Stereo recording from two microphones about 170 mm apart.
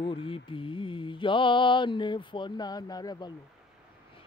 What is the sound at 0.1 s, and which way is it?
Speech, 30° left (ahead or behind).